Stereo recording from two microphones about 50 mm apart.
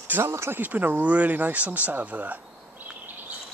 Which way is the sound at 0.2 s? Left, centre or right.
Right.